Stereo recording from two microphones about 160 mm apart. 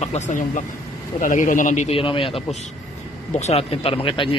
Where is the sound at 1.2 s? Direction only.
55° left (ahead or behind).